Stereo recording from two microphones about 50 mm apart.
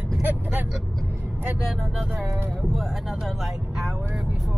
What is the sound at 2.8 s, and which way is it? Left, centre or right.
Speech, centre.